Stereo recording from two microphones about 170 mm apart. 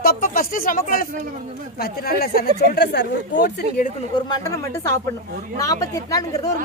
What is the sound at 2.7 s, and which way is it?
Speech, 80° left.